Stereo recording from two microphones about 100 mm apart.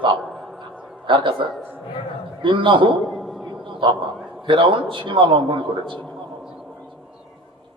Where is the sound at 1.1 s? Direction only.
55° right (ahead or behind).